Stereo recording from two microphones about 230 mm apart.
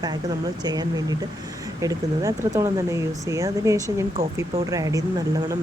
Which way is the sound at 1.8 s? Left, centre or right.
Centre.